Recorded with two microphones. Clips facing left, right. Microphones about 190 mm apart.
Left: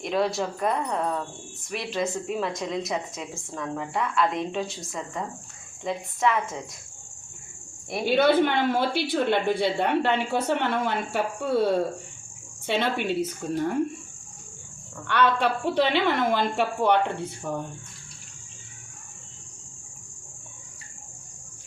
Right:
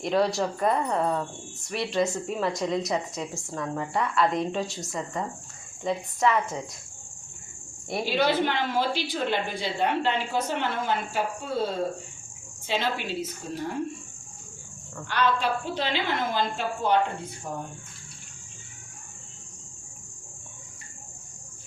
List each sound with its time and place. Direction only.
0.0 s speech: centre (ahead or behind)
8.0 s speech: 55° left (ahead or behind)
15.0 s speech: 60° left (ahead or behind)